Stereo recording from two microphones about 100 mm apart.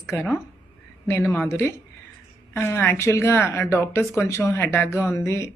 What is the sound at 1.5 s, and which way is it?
Speech, 25° left (ahead or behind).